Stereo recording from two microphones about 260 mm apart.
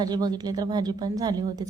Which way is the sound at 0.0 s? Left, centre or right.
Centre.